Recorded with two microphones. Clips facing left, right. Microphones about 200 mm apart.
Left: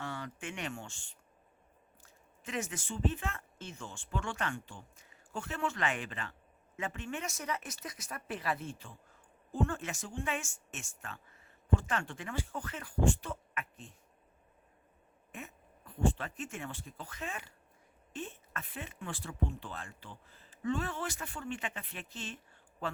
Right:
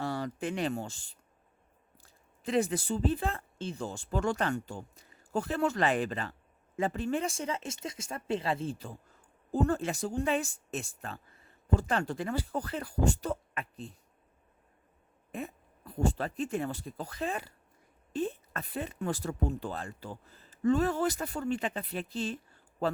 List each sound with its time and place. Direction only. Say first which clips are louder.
0.0 s speech: right 8 dB; 35° right (ahead or behind)
15.3 s speech: right 9 dB; 35° right (ahead or behind)